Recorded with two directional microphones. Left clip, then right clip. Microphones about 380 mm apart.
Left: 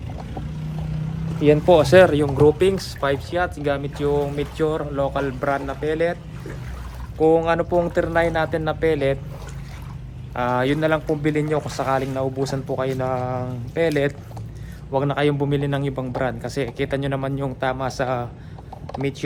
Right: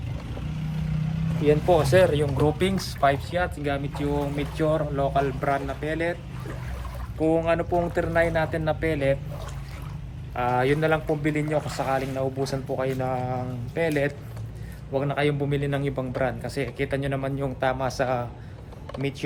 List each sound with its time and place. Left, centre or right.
1.7 s speech: centre
2.6 s speech: centre
7.2 s speech: centre
10.3 s speech: centre
18.9 s a sound: centre